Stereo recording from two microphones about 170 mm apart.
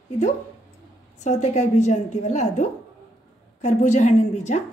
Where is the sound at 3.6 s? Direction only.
45° left (ahead or behind).